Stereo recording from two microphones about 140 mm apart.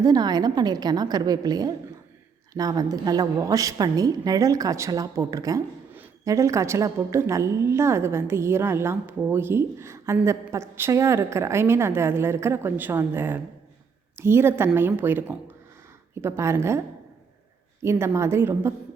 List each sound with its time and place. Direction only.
0.0 s a woman's voice: 30° right (ahead or behind)
17.8 s a woman's voice: 20° right (ahead or behind)